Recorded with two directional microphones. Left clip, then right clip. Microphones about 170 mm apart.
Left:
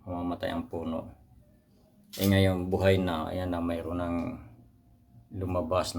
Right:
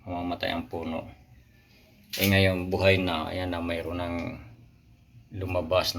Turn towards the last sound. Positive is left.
turn(degrees=25)  # may be behind; listen again after turning